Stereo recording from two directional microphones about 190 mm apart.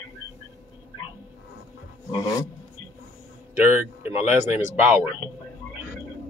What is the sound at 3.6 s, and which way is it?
Speech, 10° right (ahead or behind).